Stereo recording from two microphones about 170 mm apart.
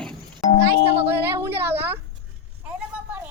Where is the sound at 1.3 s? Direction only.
15° right (ahead or behind).